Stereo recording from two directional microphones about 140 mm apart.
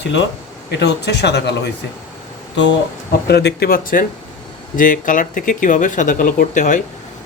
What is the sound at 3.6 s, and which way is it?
Speech, 90° left.